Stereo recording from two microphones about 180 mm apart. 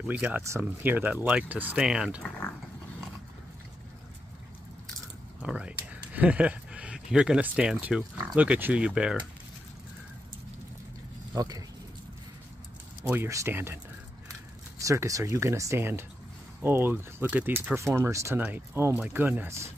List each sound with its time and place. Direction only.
0.0 s speech: 10° right (ahead or behind)
5.4 s speech: 5° right (ahead or behind)
11.3 s speech: 20° right (ahead or behind)
13.0 s speech: 10° right (ahead or behind)
14.8 s speech: 15° right (ahead or behind)